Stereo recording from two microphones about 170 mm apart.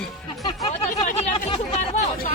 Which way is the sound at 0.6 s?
40° left (ahead or behind).